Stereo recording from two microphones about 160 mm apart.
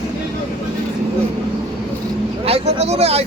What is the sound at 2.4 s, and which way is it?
Speech, 40° right (ahead or behind).